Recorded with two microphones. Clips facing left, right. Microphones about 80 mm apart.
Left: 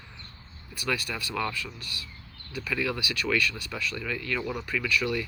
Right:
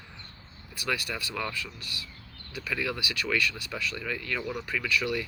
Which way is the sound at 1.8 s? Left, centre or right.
Left.